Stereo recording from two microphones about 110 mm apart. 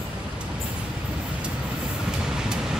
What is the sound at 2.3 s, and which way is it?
Vehicle, 5° right (ahead or behind).